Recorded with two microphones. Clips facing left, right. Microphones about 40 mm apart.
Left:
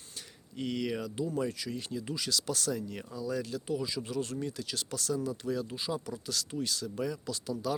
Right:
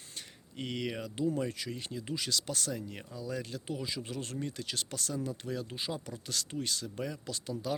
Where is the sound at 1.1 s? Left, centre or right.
Right.